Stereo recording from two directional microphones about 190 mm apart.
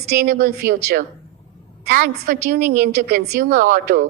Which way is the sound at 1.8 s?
50° right (ahead or behind).